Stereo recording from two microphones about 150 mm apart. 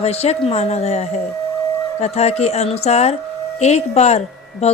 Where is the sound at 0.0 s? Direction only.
45° left (ahead or behind).